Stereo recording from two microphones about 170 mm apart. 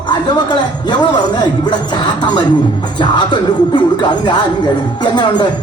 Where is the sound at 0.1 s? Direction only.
25° left (ahead or behind).